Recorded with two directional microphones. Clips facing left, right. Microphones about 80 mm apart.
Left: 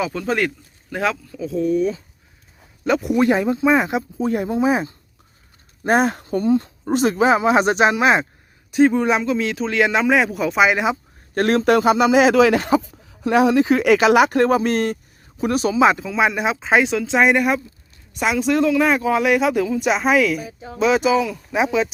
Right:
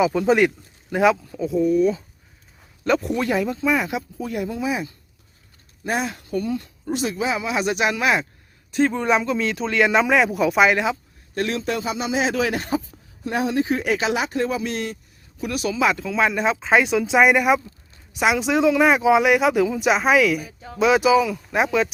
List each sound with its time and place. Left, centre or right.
0.0 s speech: centre
1.4 s speech: centre
2.8 s speech: centre
3.2 s speech: left
5.8 s speech: left
6.8 s speech: left
8.7 s speech: centre
11.3 s speech: left
15.7 s speech: left
16.0 s speech: centre